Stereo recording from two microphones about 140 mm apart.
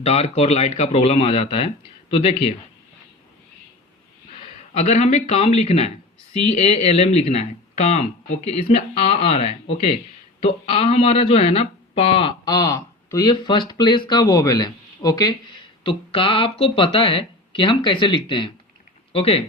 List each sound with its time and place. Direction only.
0.0 s speech: 50° left (ahead or behind)
4.7 s speech: 50° left (ahead or behind); by 15.4 s 30° left (ahead or behind)
15.8 s speech: 40° left (ahead or behind)